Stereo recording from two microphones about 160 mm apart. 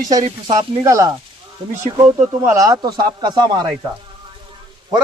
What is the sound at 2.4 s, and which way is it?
Speech, 20° right (ahead or behind).